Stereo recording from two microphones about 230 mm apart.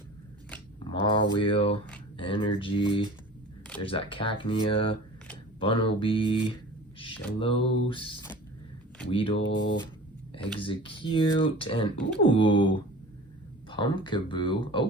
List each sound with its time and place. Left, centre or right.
1.0 s speech: left
9.4 s speech: left
10.6 s speech: left